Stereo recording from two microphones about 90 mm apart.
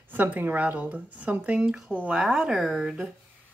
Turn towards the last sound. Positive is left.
turn(degrees=-5)  # may be behind; listen again after turning